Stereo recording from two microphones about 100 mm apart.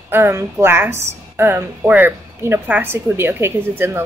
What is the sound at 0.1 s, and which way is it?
A woman's voice, 25° right (ahead or behind).